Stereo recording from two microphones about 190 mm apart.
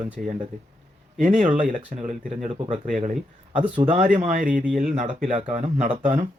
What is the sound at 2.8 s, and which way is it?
Speech, 40° right (ahead or behind).